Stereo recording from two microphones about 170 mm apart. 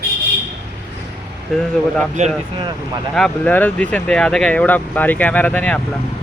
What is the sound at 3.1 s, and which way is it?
Speech, 5° left (ahead or behind).